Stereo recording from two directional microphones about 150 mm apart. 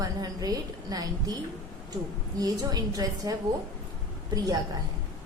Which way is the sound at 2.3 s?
25° right (ahead or behind).